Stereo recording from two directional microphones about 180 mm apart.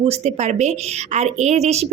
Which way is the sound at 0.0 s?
35° right (ahead or behind).